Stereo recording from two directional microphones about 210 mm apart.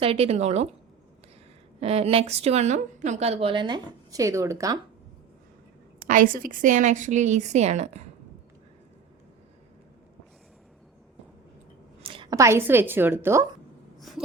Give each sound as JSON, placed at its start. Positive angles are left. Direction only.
{"t": 0.0, "sound": "a woman's voice", "side_deg": -25}
{"t": 1.8, "sound": "a woman's voice", "side_deg": -30}
{"t": 6.1, "sound": "a woman's voice", "side_deg": -40}
{"t": 12.0, "sound": "a woman's voice", "side_deg": -25}